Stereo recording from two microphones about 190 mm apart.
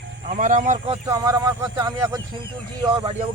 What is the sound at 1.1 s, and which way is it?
Speech, 20° right (ahead or behind).